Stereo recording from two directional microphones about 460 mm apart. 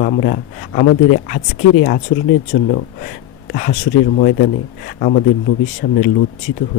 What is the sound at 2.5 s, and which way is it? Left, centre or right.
Speech, centre.